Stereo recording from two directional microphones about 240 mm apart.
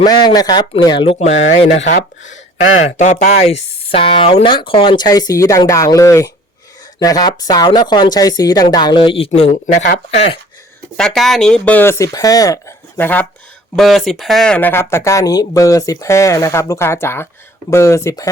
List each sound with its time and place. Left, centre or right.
0.0 s speech: centre
2.0 s speech: left
2.8 s speech: left
9.7 s speech: left
10.1 s speech: left
10.9 s speech: centre